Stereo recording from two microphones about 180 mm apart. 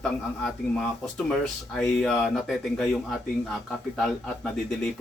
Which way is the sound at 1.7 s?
5° left (ahead or behind).